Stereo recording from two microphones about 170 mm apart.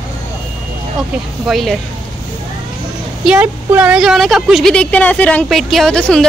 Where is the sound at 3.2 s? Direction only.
5° right (ahead or behind).